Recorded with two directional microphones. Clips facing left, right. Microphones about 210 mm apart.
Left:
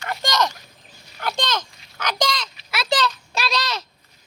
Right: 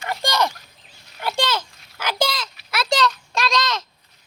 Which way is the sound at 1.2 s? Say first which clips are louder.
Right 2 dB; 10° right (ahead or behind).